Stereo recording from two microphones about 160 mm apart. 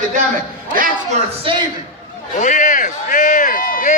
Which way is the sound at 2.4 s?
55° left (ahead or behind).